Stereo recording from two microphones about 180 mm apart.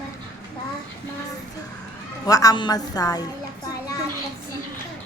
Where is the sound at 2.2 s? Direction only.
20° left (ahead or behind).